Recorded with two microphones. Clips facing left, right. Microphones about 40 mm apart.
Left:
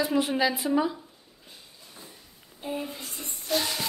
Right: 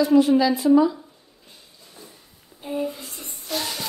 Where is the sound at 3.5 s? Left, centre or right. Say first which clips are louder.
Left 1 dB; centre.